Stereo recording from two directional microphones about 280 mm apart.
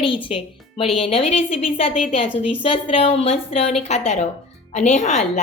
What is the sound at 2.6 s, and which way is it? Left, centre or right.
A woman's voice, centre.